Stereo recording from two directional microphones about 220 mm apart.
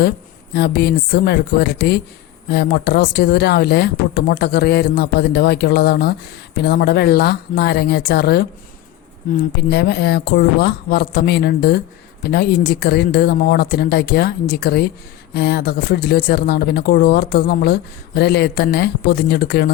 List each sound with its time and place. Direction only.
0.5 s speech: 45° left (ahead or behind)
9.6 s speech: 45° left (ahead or behind)